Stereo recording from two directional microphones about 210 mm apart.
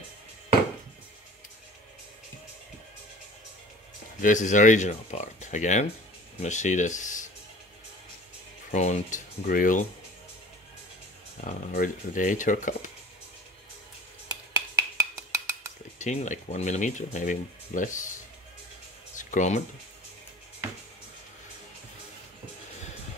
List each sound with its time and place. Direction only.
4.2 s speech: 35° left (ahead or behind)
8.7 s speech: 35° left (ahead or behind)
11.4 s speech: 40° left (ahead or behind)
14.5 s a sound: 15° right (ahead or behind)
16.0 s speech: 35° left (ahead or behind)
19.1 s a sound: 35° left (ahead or behind)